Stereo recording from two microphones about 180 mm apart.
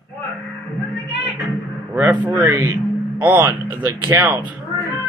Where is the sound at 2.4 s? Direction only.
15° right (ahead or behind).